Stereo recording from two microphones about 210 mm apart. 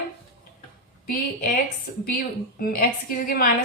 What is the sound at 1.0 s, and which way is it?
A woman's voice, 45° left (ahead or behind).